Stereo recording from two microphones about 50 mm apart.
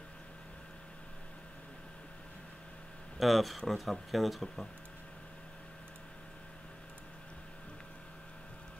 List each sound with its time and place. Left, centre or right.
3.2 s speech: centre